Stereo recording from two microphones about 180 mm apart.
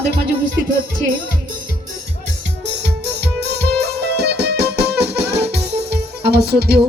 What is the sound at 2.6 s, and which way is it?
Music, 70° right (ahead or behind).